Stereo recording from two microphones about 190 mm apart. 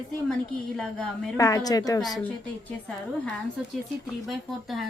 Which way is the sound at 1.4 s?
20° left (ahead or behind).